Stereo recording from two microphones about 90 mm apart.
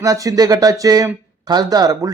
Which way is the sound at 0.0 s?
40° right (ahead or behind).